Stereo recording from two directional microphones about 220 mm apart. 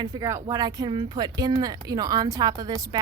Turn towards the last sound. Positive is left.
turn(degrees=-15)  # may be behind; listen again after turning